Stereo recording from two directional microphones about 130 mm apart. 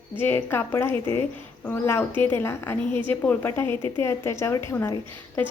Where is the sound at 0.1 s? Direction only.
15° left (ahead or behind).